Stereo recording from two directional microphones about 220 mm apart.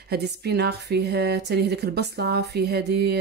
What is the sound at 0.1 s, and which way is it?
A woman's voice, 45° right (ahead or behind).